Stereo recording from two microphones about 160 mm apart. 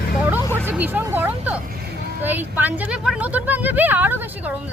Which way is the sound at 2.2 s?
10° right (ahead or behind).